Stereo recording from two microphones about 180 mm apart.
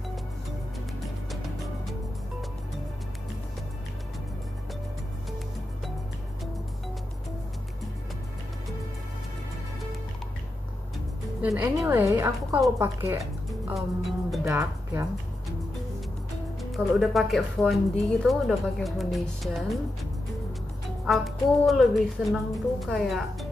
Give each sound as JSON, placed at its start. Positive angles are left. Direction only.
{"t": 11.4, "sound": "a woman's voice", "side_deg": -10}
{"t": 13.5, "sound": "music", "side_deg": 0}
{"t": 14.4, "sound": "speech", "side_deg": -15}
{"t": 16.7, "sound": "speech", "side_deg": 0}